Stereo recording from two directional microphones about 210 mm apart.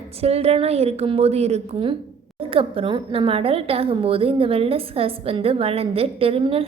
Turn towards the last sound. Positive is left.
turn(degrees=-25)  # may be behind; listen again after turning